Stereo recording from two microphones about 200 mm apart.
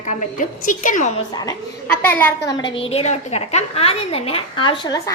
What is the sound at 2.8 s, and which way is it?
A woman's voice, 30° left (ahead or behind).